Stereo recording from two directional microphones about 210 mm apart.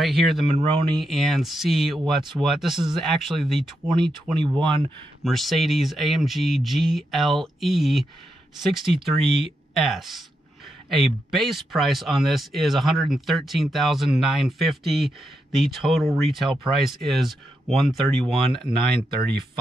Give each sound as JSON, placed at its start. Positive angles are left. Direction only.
{"t": 0.0, "sound": "speech", "side_deg": 0}
{"t": 0.6, "sound": "speech", "side_deg": -25}
{"t": 0.9, "sound": "speech", "side_deg": 0}
{"t": 3.9, "sound": "speech", "side_deg": -20}
{"t": 5.2, "sound": "speech", "side_deg": 0}
{"t": 18.2, "sound": "speech", "side_deg": -20}